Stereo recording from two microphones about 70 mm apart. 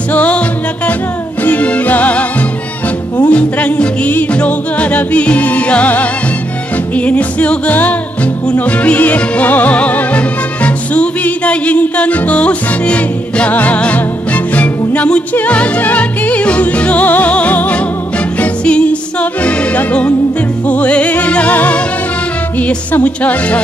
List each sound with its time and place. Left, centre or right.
0.1 s music: centre
1.4 s music: left